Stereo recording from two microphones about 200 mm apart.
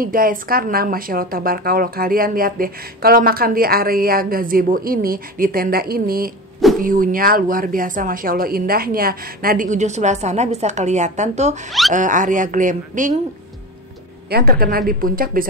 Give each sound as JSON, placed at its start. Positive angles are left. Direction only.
{"t": 0.0, "sound": "speech", "side_deg": -45}
{"t": 14.3, "sound": "speech", "side_deg": -50}